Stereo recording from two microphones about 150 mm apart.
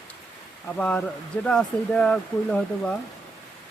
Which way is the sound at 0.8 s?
10° left (ahead or behind).